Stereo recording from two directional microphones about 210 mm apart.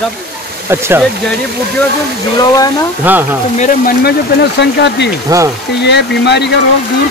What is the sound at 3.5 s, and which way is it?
Speech, 35° left (ahead or behind).